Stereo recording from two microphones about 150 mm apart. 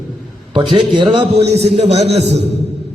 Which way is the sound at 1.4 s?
45° right (ahead or behind).